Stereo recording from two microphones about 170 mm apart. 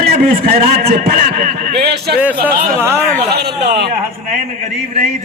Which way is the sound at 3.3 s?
70° right (ahead or behind).